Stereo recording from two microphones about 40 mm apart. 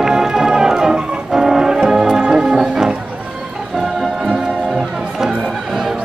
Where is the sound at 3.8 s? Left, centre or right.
Centre.